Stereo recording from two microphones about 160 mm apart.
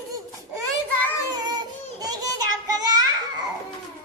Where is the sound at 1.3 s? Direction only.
25° right (ahead or behind).